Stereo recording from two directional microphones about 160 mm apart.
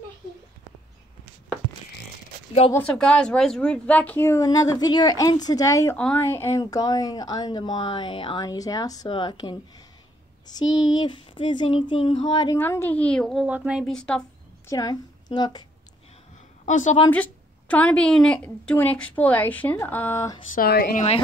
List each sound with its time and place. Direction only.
2.7 s speech: 5° left (ahead or behind); by 12.5 s 30° left (ahead or behind)
12.5 s a woman's voice: 15° left (ahead or behind)
14.7 s a woman's voice: 25° left (ahead or behind)
16.6 s a woman's voice: 50° left (ahead or behind)
17.1 s speech: 10° left (ahead or behind)
20.5 s a woman's voice: 70° left (ahead or behind)